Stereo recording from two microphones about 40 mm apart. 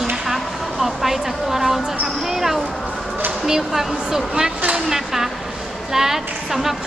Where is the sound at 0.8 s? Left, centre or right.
Centre.